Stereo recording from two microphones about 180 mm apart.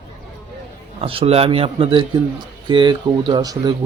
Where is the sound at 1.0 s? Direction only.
30° right (ahead or behind).